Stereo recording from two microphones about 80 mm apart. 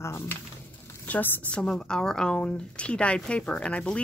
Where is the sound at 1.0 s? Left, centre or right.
Left.